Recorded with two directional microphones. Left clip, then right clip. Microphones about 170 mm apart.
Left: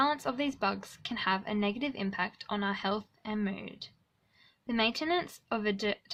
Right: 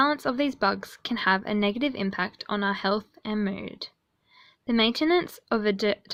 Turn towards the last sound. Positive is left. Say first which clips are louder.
# right 7 dB
turn(degrees=-30)  # may be behind; listen again after turning